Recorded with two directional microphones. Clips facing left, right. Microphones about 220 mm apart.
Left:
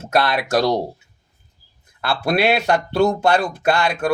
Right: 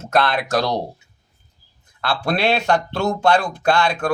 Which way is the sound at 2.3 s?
10° left (ahead or behind).